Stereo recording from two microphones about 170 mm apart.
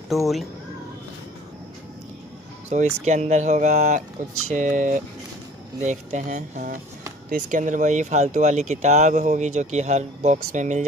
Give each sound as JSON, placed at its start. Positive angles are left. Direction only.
{"t": 0.1, "sound": "speech", "side_deg": 0}
{"t": 2.7, "sound": "speech", "side_deg": -45}